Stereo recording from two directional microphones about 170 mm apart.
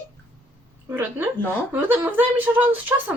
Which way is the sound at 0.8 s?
10° right (ahead or behind).